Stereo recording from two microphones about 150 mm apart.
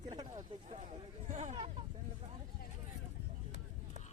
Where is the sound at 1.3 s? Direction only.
50° right (ahead or behind).